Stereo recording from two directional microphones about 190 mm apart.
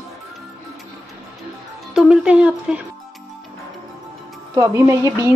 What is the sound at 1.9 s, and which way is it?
Speech, 5° right (ahead or behind).